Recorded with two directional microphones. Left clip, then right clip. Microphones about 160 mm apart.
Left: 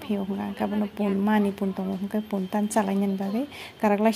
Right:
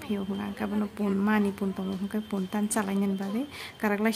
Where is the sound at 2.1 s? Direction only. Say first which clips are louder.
Left 5 dB; 10° left (ahead or behind).